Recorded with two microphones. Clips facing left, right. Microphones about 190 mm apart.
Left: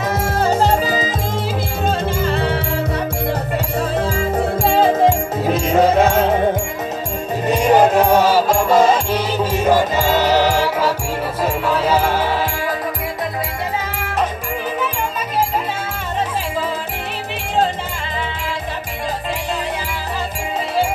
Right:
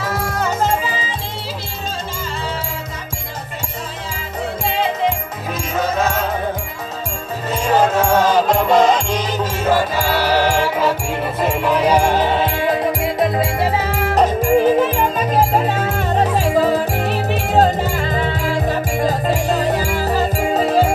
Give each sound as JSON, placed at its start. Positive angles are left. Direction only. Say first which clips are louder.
{"t": 0.4, "sound": "music", "louder": "left 4 dB", "side_deg": 35}
{"t": 4.6, "sound": "music", "louder": "left 6 dB", "side_deg": 45}
{"t": 5.5, "sound": "music", "louder": "left 7 dB", "side_deg": 30}
{"t": 7.5, "sound": "music", "louder": "left 3 dB", "side_deg": 15}
{"t": 11.4, "sound": "music", "louder": "right 2 dB", "side_deg": -15}
{"t": 14.1, "sound": "music", "louder": "right 9 dB", "side_deg": -40}
{"t": 16.5, "sound": "music", "louder": "right 9 dB", "side_deg": -40}